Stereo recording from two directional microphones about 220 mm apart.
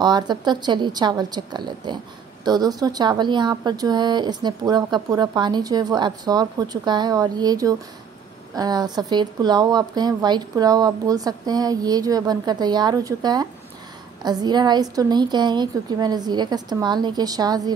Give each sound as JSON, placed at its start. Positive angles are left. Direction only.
{"t": 0.0, "sound": "a woman's voice", "side_deg": -20}